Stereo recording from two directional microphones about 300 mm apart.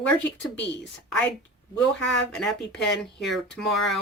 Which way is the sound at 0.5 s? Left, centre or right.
Left.